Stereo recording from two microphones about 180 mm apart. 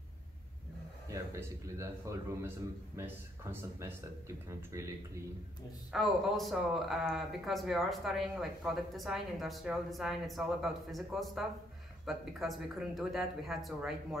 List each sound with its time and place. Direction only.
1.0 s a man's voice: 15° right (ahead or behind)
4.5 s a man's voice: 15° right (ahead or behind)
5.9 s speech: centre (ahead or behind)